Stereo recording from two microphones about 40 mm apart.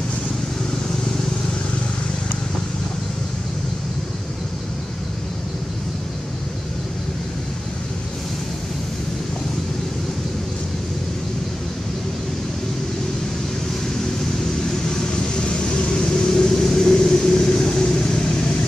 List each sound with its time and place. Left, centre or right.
15.4 s vehicle: left
16.1 s vehicle: centre